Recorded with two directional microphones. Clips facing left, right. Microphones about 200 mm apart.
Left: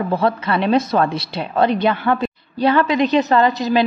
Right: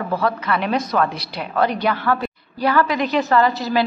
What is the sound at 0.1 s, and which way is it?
A woman's voice, 25° left (ahead or behind).